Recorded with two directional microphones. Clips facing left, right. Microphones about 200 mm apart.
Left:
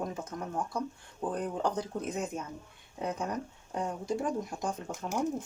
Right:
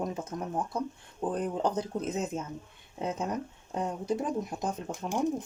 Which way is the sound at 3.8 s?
20° right (ahead or behind).